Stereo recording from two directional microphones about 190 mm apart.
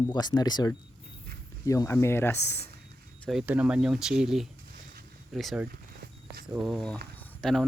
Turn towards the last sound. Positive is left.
turn(degrees=0)  # may be behind; listen again after turning